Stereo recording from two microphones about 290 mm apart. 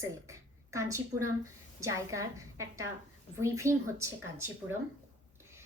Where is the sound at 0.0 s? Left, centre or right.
Centre.